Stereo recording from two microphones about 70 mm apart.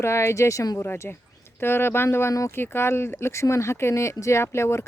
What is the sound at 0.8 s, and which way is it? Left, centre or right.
Speech, left.